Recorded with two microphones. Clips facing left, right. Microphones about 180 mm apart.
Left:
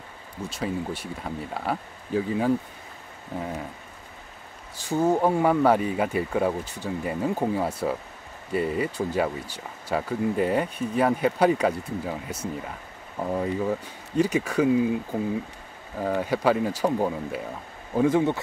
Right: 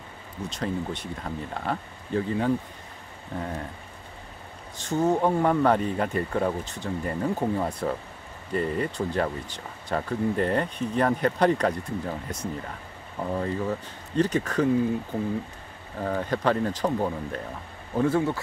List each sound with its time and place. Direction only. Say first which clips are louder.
0.5 s speech: left 1 dB; 5° left (ahead or behind)
4.7 s speech: left 1 dB; 10° left (ahead or behind)
16.0 s speech: left 2 dB; 5° left (ahead or behind)